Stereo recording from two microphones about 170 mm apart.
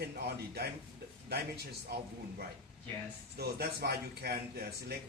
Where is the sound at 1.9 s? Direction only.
70° right (ahead or behind).